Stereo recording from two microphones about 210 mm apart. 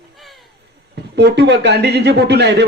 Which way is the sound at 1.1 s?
55° right (ahead or behind).